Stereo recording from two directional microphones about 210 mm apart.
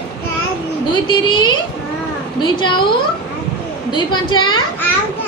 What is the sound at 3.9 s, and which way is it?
Speech, 20° left (ahead or behind).